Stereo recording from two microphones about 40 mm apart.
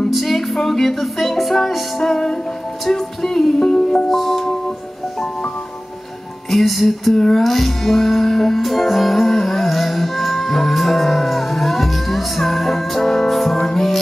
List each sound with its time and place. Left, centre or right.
0.1 s music: centre
6.5 s music: centre
7.2 s music: centre